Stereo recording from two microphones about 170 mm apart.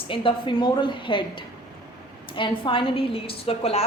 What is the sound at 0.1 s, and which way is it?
A woman's voice, 30° left (ahead or behind).